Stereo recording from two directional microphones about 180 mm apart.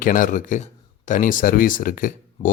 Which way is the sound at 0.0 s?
50° left (ahead or behind).